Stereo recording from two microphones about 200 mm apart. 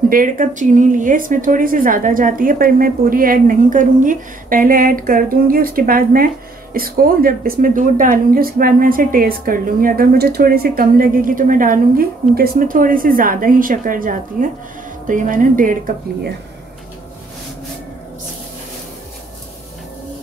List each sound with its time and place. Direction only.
0.1 s a woman's voice: 45° right (ahead or behind)